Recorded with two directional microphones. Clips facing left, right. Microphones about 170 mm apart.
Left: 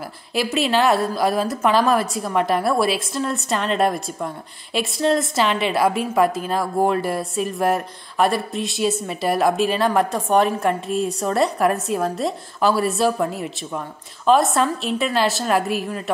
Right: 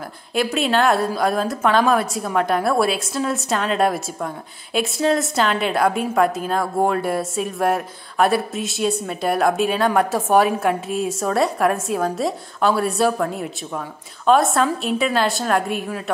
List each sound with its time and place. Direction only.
0.3 s a woman's voice: centre (ahead or behind)